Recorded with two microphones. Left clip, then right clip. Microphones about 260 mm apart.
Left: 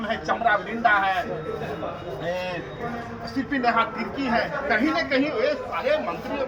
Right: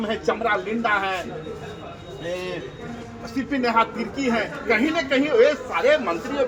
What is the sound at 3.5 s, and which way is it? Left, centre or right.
Speech, centre.